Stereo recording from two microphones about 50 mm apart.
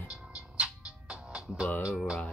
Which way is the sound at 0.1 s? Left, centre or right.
Centre.